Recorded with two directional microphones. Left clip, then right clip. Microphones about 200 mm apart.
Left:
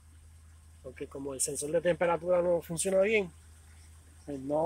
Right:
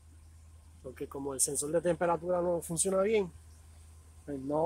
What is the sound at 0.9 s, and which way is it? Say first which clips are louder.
Speech: right 1 dB; 5° right (ahead or behind).